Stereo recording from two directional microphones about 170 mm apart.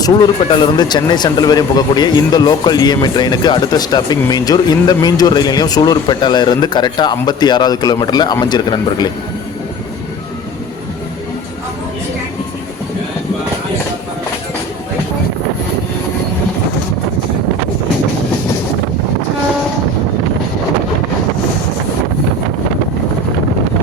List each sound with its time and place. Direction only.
0.0 s speech: 25° left (ahead or behind)